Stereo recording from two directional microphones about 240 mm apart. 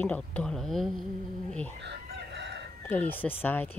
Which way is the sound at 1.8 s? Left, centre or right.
Right.